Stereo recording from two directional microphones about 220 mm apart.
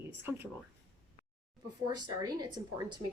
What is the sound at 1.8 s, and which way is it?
Speech, 20° right (ahead or behind).